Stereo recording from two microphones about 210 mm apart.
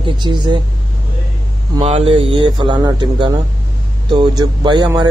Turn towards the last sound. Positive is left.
turn(degrees=-20)  # may be behind; listen again after turning